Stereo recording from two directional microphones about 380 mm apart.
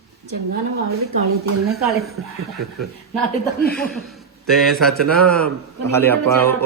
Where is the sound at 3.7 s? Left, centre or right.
Centre.